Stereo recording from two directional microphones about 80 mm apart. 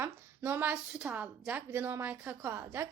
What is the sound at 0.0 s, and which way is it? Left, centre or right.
A woman's voice, right.